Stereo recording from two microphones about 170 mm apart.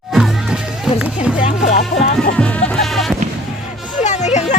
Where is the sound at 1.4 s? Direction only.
45° left (ahead or behind).